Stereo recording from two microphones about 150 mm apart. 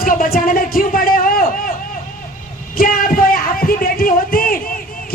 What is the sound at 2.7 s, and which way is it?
A man's voice, 70° left (ahead or behind).